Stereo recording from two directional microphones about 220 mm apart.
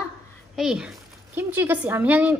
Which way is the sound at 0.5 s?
5° right (ahead or behind).